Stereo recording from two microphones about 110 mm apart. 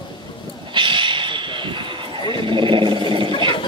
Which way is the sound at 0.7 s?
50° right (ahead or behind).